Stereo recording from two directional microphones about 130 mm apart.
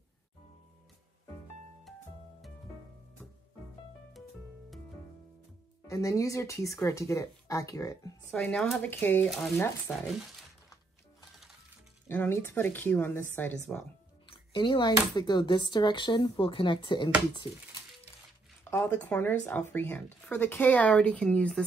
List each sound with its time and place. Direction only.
5.9 s speech: 25° left (ahead or behind)
8.3 s speech: 10° left (ahead or behind)
12.1 s speech: 15° left (ahead or behind)
14.5 s speech: 40° left (ahead or behind)
18.6 s speech: 15° left (ahead or behind)